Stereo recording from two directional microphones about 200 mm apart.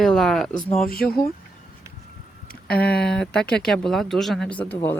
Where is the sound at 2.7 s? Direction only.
50° left (ahead or behind).